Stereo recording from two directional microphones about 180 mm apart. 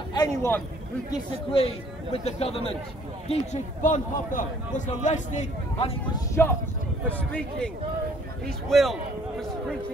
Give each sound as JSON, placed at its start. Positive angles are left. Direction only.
{"t": 0.1, "sound": "a man's voice", "side_deg": 20}
{"t": 1.5, "sound": "a man's voice", "side_deg": 30}
{"t": 6.1, "sound": "speech", "side_deg": 15}